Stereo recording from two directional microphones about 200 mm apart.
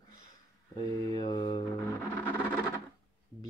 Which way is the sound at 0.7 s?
20° left (ahead or behind).